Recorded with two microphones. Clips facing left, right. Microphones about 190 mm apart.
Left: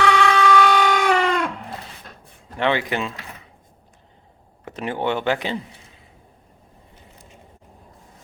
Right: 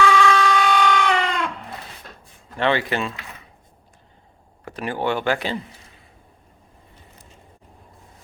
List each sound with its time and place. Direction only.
0.0 s a sound: 65° left (ahead or behind)
2.6 s speech: 15° left (ahead or behind)
4.6 s speech: 20° left (ahead or behind)